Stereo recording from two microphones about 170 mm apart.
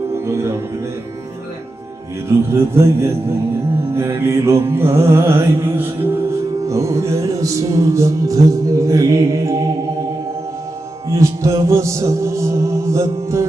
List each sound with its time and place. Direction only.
0.1 s music: 15° right (ahead or behind)
2.5 s music: 15° right (ahead or behind)
11.1 s music: 15° right (ahead or behind)